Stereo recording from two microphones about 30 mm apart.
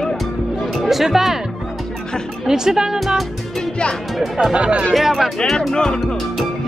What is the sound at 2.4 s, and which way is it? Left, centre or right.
Speech, right.